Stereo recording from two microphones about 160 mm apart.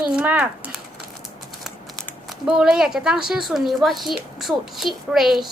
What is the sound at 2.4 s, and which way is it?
A woman's voice, 5° right (ahead or behind).